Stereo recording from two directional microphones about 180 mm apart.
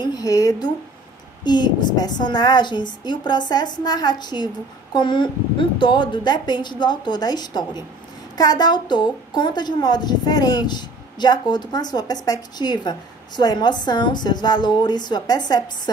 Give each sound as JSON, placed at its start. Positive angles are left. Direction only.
{"t": 0.0, "sound": "a woman's voice", "side_deg": 20}